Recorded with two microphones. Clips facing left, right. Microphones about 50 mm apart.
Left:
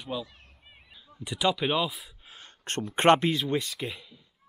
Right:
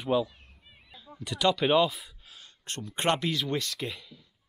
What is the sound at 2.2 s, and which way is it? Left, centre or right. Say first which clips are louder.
Speech: left 4 dB; left.